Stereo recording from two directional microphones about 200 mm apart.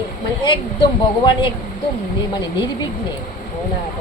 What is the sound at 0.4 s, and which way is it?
Speech, 25° left (ahead or behind).